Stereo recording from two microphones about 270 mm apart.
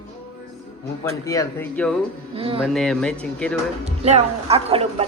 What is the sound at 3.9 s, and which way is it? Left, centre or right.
Speech, right.